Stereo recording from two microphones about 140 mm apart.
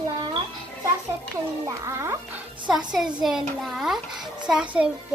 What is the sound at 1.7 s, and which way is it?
Speech, 20° right (ahead or behind).